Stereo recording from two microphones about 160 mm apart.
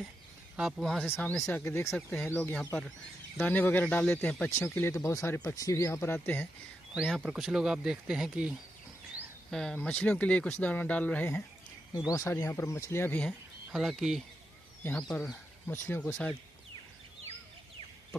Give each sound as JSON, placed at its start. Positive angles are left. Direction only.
{"t": 0.6, "sound": "speech", "side_deg": 0}
{"t": 1.1, "sound": "speech", "side_deg": 10}
{"t": 6.9, "sound": "speech", "side_deg": 0}
{"t": 9.5, "sound": "speech", "side_deg": 5}
{"t": 13.7, "sound": "speech", "side_deg": 0}